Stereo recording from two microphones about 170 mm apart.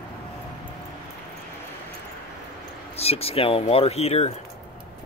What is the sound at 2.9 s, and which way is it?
Speech, 35° left (ahead or behind).